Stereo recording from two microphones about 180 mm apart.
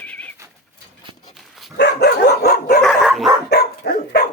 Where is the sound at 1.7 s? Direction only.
60° left (ahead or behind).